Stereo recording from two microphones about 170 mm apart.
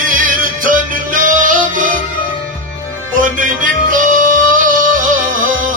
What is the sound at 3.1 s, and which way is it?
Music, 50° right (ahead or behind).